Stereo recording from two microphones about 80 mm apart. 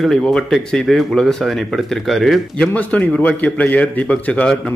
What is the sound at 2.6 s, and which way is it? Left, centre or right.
A man's voice, centre.